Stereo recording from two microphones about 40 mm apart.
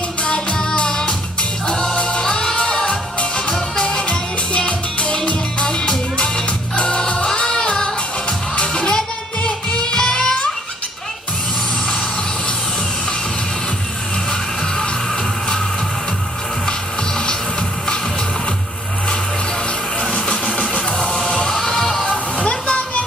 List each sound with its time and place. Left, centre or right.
0.2 s music: left
20.0 s music: left
21.5 s music: centre
22.4 s a sound: left